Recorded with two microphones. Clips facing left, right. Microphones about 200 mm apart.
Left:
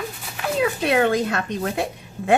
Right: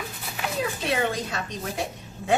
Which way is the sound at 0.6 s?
65° left (ahead or behind).